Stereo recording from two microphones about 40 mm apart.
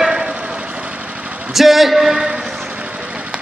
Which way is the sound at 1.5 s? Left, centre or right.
Centre.